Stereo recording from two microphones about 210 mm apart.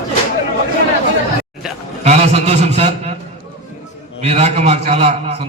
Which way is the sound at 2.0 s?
30° right (ahead or behind).